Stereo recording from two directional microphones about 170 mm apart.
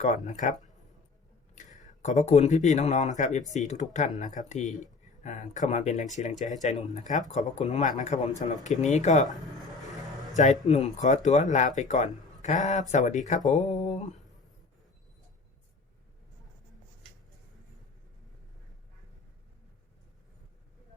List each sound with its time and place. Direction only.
0.0 s speech: 45° left (ahead or behind)
1.5 s speech: 45° left (ahead or behind)
10.3 s speech: 45° left (ahead or behind)